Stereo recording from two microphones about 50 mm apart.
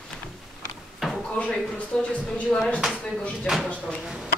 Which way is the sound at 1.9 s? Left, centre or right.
Centre.